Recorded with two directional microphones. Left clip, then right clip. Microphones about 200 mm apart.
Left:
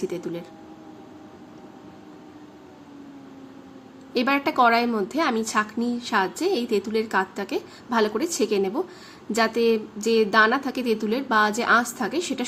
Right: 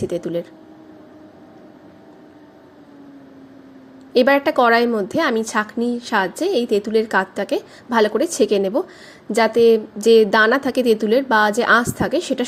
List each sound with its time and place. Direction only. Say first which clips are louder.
0.1 s a woman's voice: right 8 dB; 25° right (ahead or behind)
4.1 s a woman's voice: right 8 dB; 25° right (ahead or behind)